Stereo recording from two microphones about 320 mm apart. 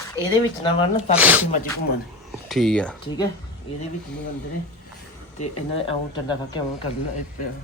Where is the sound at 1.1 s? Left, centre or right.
Centre.